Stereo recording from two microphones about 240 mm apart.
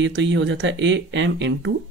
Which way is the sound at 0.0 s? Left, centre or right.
Right.